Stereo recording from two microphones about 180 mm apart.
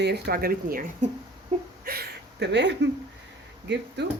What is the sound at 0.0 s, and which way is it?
Speech, 60° right (ahead or behind).